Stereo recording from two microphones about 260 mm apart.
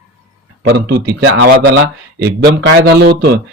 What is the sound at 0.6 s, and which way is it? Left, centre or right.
Speech, right.